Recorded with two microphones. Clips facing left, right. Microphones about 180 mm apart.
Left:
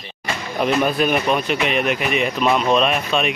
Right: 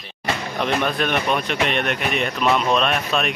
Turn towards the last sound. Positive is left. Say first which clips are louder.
# left 2 dB
turn(degrees=0)  # may be behind; listen again after turning